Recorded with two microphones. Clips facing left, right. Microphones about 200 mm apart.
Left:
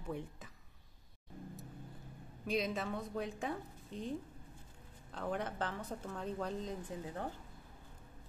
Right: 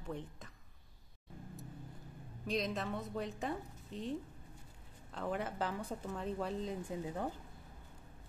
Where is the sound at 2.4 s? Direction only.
5° left (ahead or behind).